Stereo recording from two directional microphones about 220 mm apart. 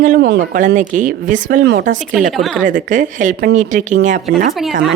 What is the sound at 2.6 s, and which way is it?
Speech, 35° right (ahead or behind).